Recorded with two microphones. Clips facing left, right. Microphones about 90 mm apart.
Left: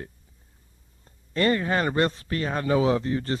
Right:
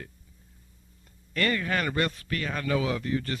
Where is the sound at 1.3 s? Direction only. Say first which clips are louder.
Left 5 dB; 30° left (ahead or behind).